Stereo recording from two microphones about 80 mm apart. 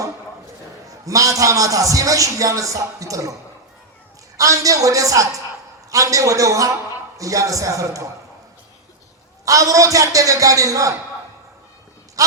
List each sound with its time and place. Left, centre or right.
0.9 s a man's voice: right
4.4 s a man's voice: right
9.4 s a man's voice: right